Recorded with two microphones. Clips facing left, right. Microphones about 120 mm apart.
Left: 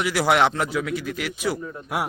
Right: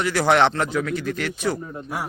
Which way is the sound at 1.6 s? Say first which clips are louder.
Right 1 dB; 30° right (ahead or behind).